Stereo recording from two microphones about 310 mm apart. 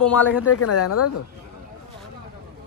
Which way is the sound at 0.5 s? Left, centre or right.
Left.